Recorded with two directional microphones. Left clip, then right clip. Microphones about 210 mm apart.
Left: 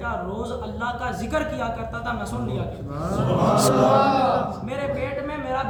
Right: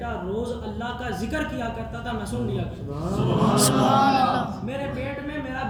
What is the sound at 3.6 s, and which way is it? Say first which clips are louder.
Speech: left 2 dB; 25° left (ahead or behind).